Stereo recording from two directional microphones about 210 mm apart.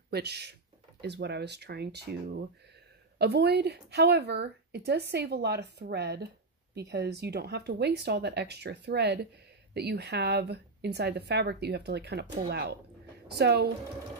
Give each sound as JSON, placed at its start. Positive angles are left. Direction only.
{"t": 0.1, "sound": "speech", "side_deg": -50}
{"t": 3.2, "sound": "speech", "side_deg": -50}